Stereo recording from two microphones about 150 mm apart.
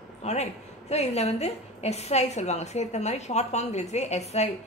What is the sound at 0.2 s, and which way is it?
A woman's voice, 45° left (ahead or behind).